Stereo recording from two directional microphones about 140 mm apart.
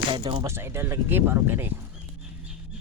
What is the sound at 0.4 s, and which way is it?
Speech, 20° right (ahead or behind).